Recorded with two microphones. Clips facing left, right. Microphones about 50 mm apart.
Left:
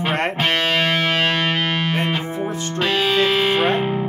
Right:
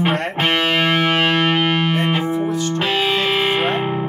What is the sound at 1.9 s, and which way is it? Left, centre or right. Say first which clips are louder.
Music: right 3 dB; right.